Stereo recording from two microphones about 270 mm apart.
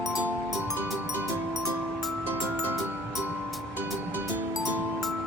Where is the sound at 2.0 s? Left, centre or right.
Centre.